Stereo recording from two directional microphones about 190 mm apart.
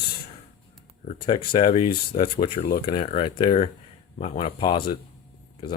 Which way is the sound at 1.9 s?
50° left (ahead or behind).